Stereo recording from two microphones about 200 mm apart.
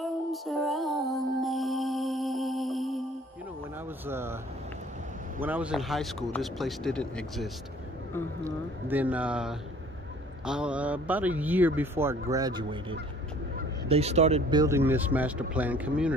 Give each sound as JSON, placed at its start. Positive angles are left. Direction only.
{"t": 0.0, "sound": "music", "side_deg": 0}
{"t": 4.1, "sound": "a man's voice", "side_deg": -10}
{"t": 5.4, "sound": "speech", "side_deg": -5}
{"t": 8.5, "sound": "a man's voice", "side_deg": -10}
{"t": 13.8, "sound": "speech", "side_deg": -30}
{"t": 14.5, "sound": "a man's voice", "side_deg": -15}